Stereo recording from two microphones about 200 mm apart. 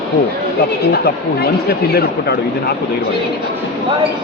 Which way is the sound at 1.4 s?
50° left (ahead or behind).